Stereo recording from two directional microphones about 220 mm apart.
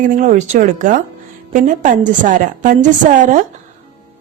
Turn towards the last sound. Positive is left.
turn(degrees=-35)  # may be behind; listen again after turning